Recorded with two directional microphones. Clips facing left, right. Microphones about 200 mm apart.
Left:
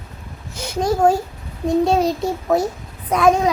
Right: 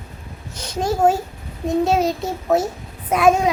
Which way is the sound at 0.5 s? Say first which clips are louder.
Left 4 dB; 10° left (ahead or behind).